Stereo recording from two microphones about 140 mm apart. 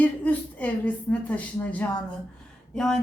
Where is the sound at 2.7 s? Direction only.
5° left (ahead or behind).